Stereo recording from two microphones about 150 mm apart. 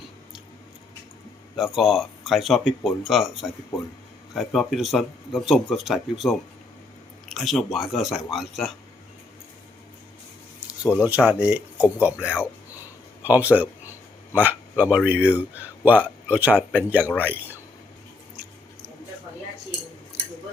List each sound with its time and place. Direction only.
1.5 s speech: centre (ahead or behind)
3.7 s a man's voice: 20° left (ahead or behind)
4.4 s speech: centre (ahead or behind)
10.9 s speech: 10° right (ahead or behind)
12.7 s a sound: 10° right (ahead or behind)
14.3 s a man's voice: 10° right (ahead or behind)